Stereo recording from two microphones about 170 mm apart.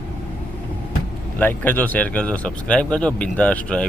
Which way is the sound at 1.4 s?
10° left (ahead or behind).